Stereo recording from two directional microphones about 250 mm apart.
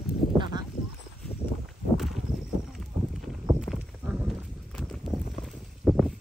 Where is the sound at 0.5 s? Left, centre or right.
Centre.